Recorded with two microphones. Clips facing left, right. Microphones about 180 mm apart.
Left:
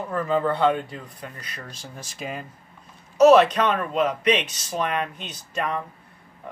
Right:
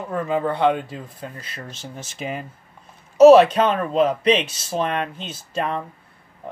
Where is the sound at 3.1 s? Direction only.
30° right (ahead or behind).